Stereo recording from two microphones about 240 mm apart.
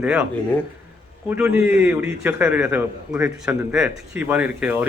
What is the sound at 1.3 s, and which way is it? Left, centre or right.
A man's voice, centre.